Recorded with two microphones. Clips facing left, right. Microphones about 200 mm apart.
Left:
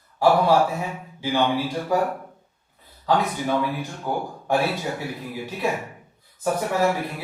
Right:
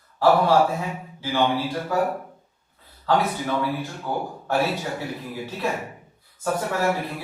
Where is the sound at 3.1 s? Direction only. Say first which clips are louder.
Left 1 dB; 15° left (ahead or behind).